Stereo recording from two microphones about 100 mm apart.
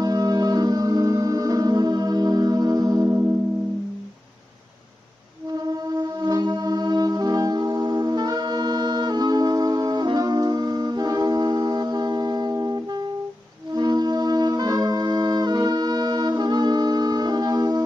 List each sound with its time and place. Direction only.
0.0 s music: 40° right (ahead or behind)
5.5 s music: 40° right (ahead or behind)